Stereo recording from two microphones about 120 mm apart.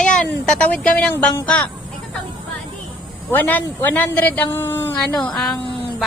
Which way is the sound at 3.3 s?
15° left (ahead or behind).